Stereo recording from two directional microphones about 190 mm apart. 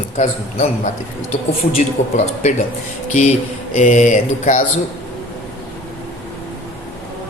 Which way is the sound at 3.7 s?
40° left (ahead or behind).